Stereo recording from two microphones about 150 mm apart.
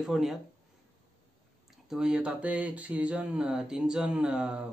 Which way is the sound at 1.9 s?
5° right (ahead or behind).